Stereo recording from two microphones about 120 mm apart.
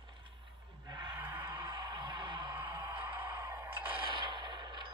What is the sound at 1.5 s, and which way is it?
Music, 35° right (ahead or behind).